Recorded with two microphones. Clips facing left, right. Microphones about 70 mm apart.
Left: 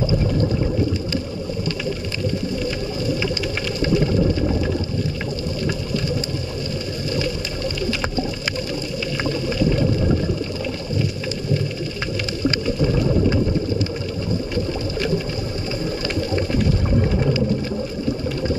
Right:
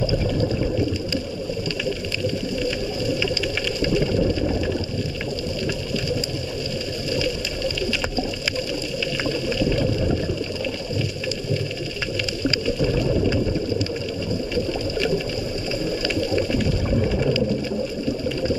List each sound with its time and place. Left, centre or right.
3.8 s a sound: left
9.2 s boat: left
12.4 s boat: left
14.5 s a sound: left
16.2 s water: left
17.0 s boat: left